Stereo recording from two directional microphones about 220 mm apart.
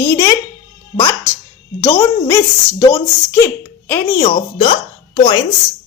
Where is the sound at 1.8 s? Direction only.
15° left (ahead or behind).